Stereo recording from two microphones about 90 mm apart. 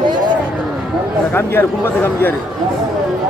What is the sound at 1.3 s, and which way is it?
Speech, 25° left (ahead or behind).